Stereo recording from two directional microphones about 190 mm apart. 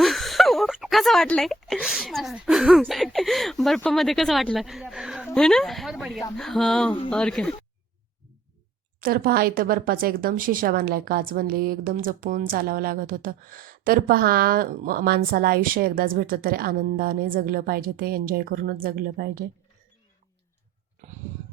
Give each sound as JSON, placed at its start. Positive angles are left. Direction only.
{"t": 0.0, "sound": "speech", "side_deg": 0}
{"t": 9.0, "sound": "speech", "side_deg": -50}